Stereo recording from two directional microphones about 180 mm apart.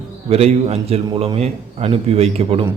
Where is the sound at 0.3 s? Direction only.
35° right (ahead or behind).